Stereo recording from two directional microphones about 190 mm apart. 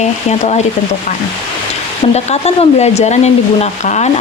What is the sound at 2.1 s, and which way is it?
Speech, 35° left (ahead or behind).